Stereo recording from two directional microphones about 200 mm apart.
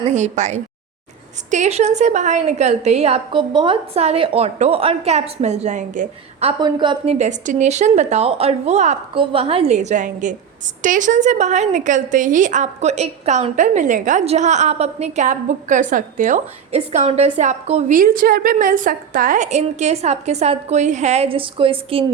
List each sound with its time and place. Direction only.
0.1 s a woman's voice: 35° right (ahead or behind)
6.6 s a woman's voice: 20° right (ahead or behind)